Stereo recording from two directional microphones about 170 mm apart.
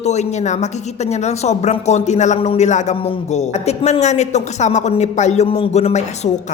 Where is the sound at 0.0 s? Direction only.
40° left (ahead or behind).